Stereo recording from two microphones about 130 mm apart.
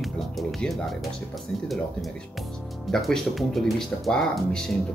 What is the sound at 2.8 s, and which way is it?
Speech, centre (ahead or behind).